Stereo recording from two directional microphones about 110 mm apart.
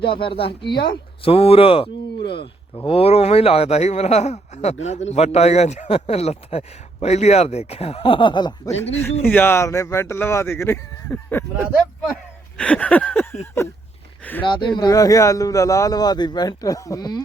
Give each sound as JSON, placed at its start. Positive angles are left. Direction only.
{"t": 0.0, "sound": "a man's voice", "side_deg": 50}
{"t": 8.7, "sound": "a man's voice", "side_deg": 75}
{"t": 9.3, "sound": "speech", "side_deg": 20}
{"t": 13.6, "sound": "speech", "side_deg": 25}
{"t": 14.4, "sound": "speech", "side_deg": 50}
{"t": 14.8, "sound": "a man's voice", "side_deg": 35}